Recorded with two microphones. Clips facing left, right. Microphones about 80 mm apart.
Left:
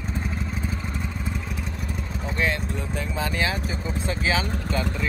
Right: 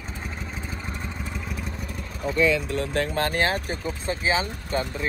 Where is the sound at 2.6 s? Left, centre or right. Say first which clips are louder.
Right 4 dB; right.